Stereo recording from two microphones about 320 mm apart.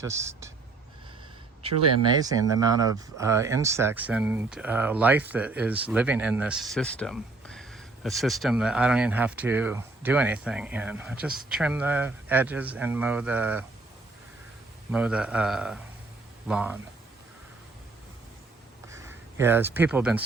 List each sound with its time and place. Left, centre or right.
0.0 s a man's voice: centre
1.6 s a man's voice: centre
14.9 s speech: centre
18.9 s speech: centre